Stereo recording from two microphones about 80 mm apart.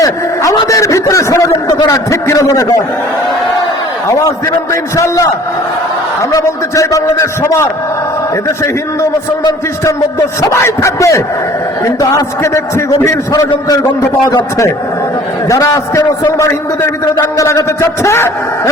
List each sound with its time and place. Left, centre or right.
0.7 s a sound: left
1.9 s a man's voice: left
4.7 s a man's voice: left
6.3 s a man's voice: left
7.4 s a man's voice: left
9.8 s a man's voice: left
15.4 s a man's voice: left
17.3 s a man's voice: left